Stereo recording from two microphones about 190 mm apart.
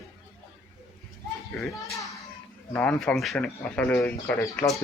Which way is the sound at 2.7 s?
5° left (ahead or behind).